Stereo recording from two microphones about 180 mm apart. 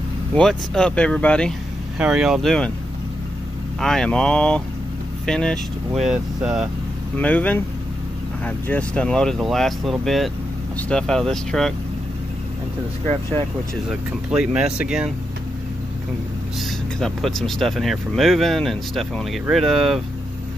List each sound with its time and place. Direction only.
0.3 s speech: 5° left (ahead or behind)
3.8 s speech: 5° left (ahead or behind)
7.2 s speech: 10° left (ahead or behind)
13.1 s speech: 30° right (ahead or behind)
13.8 s speech: 5° right (ahead or behind)
17.0 s speech: centre (ahead or behind)